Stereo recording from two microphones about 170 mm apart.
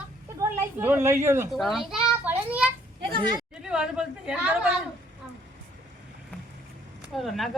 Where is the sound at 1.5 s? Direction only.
Centre (ahead or behind).